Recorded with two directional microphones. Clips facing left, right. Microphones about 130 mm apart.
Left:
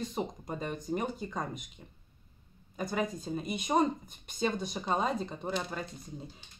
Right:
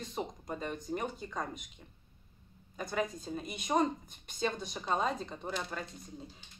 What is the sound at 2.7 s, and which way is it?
Speech, 10° left (ahead or behind).